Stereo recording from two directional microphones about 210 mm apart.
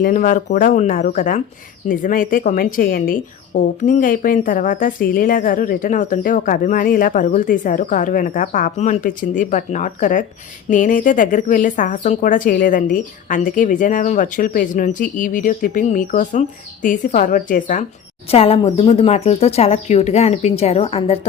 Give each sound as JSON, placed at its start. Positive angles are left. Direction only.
{"t": 0.0, "sound": "a woman's voice", "side_deg": 40}
{"t": 18.3, "sound": "speech", "side_deg": 30}